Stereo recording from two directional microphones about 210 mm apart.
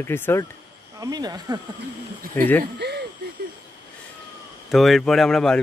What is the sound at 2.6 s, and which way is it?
Speech, 50° right (ahead or behind).